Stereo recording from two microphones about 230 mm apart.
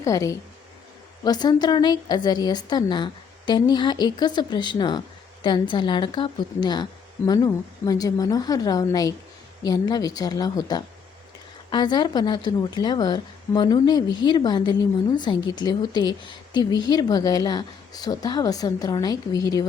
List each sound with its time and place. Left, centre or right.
0.0 s a woman's voice: centre